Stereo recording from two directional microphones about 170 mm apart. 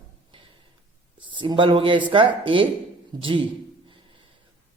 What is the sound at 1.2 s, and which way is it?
Speech, 30° right (ahead or behind).